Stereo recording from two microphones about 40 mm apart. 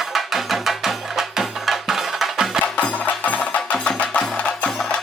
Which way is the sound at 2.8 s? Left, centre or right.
Left.